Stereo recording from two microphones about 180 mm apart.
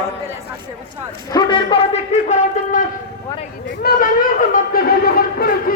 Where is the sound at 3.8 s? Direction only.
55° left (ahead or behind).